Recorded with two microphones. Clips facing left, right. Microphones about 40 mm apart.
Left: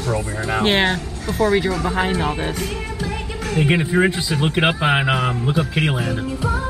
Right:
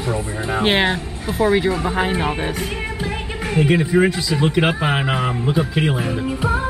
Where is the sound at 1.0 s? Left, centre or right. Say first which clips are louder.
Even; right.